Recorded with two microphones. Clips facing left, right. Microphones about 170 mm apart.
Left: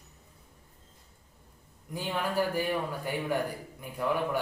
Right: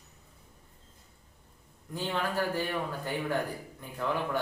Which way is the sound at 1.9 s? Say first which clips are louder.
Even; 10° left (ahead or behind).